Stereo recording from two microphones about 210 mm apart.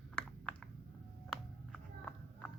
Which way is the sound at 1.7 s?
5° left (ahead or behind).